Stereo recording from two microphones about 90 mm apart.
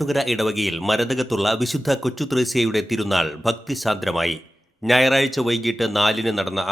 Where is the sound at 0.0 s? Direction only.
Centre (ahead or behind).